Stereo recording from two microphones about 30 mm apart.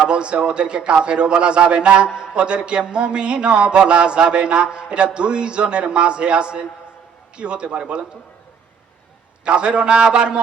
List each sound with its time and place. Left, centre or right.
0.0 s a man's voice: right
9.4 s a man's voice: right